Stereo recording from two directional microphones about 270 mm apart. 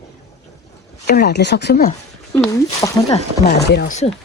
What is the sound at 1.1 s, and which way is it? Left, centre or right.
Speech, left.